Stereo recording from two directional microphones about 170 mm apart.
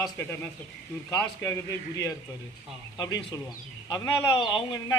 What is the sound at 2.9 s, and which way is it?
A man's voice, 20° left (ahead or behind).